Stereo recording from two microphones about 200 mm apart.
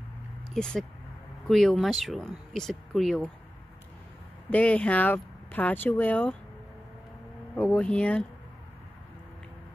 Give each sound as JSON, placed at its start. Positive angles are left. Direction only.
{"t": 0.6, "sound": "speech", "side_deg": 5}
{"t": 4.5, "sound": "speech", "side_deg": 5}
{"t": 7.5, "sound": "speech", "side_deg": 5}